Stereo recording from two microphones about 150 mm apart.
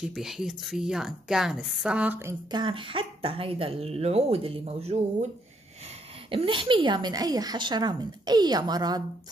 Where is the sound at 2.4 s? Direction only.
30° right (ahead or behind).